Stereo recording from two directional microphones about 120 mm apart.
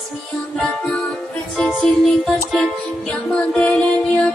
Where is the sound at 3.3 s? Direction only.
10° left (ahead or behind).